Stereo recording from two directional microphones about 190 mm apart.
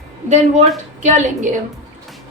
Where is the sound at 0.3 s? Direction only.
40° right (ahead or behind).